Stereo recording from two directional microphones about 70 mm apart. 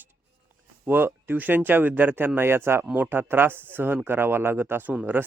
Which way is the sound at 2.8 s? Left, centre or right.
Right.